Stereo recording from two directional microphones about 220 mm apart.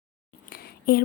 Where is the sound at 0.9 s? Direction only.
45° left (ahead or behind).